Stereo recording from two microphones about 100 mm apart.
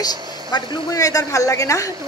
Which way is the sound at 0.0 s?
45° left (ahead or behind).